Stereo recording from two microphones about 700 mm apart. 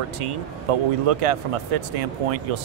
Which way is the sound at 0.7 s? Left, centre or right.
Right.